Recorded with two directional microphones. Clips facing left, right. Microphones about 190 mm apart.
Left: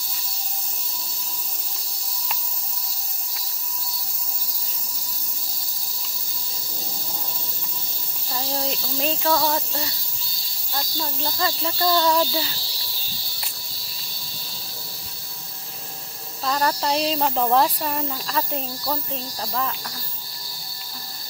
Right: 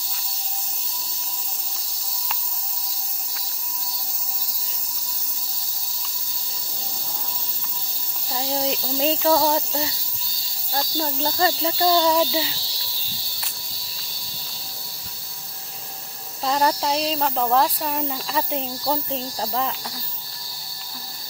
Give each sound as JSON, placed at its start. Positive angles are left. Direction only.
{"t": 8.3, "sound": "speech", "side_deg": -15}
{"t": 10.7, "sound": "speech", "side_deg": -40}
{"t": 11.4, "sound": "speech", "side_deg": -20}
{"t": 16.4, "sound": "speech", "side_deg": -20}
{"t": 16.8, "sound": "speech", "side_deg": 0}
{"t": 19.1, "sound": "speech", "side_deg": -25}